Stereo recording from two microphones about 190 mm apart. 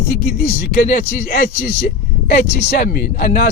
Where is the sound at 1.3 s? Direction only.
50° left (ahead or behind).